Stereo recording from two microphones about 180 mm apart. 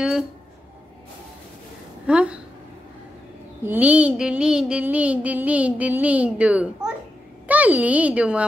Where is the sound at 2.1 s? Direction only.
5° right (ahead or behind).